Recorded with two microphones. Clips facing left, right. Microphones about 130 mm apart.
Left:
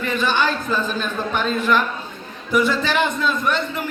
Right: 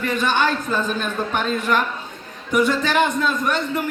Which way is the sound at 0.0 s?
50° right (ahead or behind).